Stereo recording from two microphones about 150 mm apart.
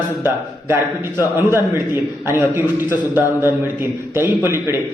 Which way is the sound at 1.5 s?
15° right (ahead or behind).